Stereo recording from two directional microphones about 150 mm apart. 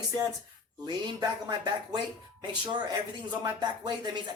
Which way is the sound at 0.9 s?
30° right (ahead or behind).